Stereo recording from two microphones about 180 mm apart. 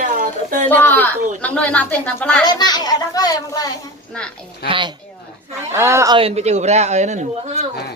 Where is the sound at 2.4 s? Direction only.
20° left (ahead or behind).